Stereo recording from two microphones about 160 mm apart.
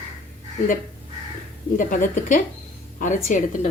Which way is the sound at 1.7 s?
55° left (ahead or behind).